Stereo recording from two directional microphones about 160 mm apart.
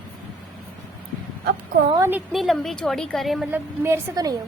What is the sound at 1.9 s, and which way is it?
Speech, 15° right (ahead or behind).